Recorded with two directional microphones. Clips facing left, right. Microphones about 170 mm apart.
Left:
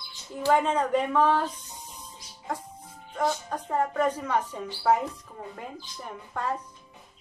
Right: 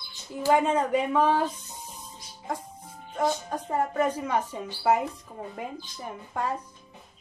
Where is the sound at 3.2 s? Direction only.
10° right (ahead or behind).